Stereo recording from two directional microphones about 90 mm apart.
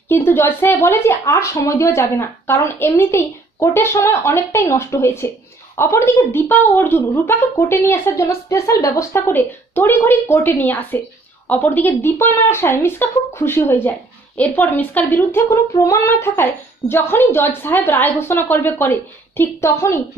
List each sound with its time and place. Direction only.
0.1 s a woman's voice: 25° left (ahead or behind)
15.7 s a woman's voice: 35° left (ahead or behind)